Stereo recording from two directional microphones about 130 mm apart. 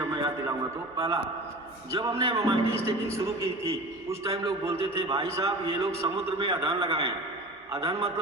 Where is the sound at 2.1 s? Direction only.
45° right (ahead or behind).